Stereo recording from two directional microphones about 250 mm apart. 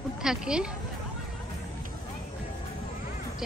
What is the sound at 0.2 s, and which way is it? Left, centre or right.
Speech, centre.